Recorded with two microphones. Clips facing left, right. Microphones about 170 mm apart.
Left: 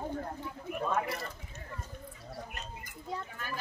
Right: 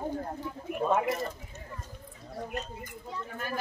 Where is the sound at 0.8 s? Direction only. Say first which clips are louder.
Right 6 dB; 20° right (ahead or behind).